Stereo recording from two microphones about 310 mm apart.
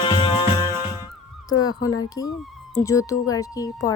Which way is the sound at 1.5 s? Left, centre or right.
Left.